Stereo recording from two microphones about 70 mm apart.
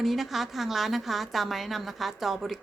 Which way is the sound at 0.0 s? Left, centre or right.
Centre.